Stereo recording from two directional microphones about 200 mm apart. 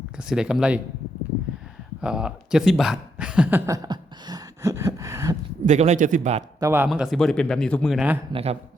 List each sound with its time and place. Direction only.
0.2 s speech: 5° right (ahead or behind)
2.0 s speech: 5° right (ahead or behind)
3.8 s a sound: 20° right (ahead or behind)
5.6 s speech: 35° right (ahead or behind)
6.6 s speech: 10° right (ahead or behind)
8.3 s speech: 30° right (ahead or behind)